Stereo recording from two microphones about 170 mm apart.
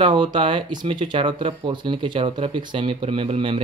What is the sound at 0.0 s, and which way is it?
Speech, 30° right (ahead or behind).